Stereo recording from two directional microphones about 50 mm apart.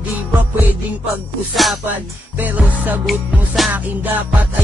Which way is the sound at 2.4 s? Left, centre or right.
Right.